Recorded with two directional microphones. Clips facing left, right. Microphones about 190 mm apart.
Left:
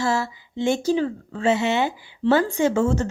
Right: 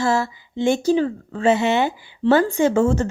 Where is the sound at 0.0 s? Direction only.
50° right (ahead or behind).